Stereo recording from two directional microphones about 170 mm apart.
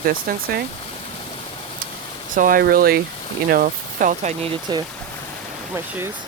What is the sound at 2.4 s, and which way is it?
Speech, 55° right (ahead or behind).